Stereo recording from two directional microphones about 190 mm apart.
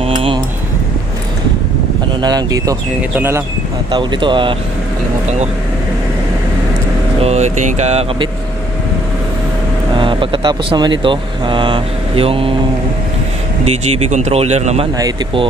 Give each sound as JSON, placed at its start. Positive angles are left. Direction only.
{"t": 0.0, "sound": "a sound", "side_deg": -30}
{"t": 2.2, "sound": "speech", "side_deg": -20}
{"t": 3.9, "sound": "speech", "side_deg": -25}
{"t": 7.2, "sound": "speech", "side_deg": -35}
{"t": 9.9, "sound": "speech", "side_deg": -25}
{"t": 13.7, "sound": "speech", "side_deg": -35}
{"t": 15.0, "sound": "speech", "side_deg": -20}